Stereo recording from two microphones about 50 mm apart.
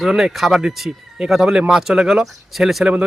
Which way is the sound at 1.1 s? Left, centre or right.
Centre.